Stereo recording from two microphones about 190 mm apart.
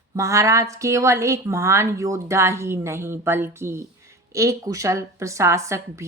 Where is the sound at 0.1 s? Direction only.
15° right (ahead or behind).